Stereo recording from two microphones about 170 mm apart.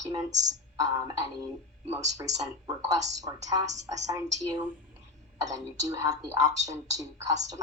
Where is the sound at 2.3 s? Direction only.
20° right (ahead or behind).